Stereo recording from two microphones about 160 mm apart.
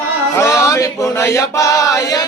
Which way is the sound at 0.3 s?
15° left (ahead or behind).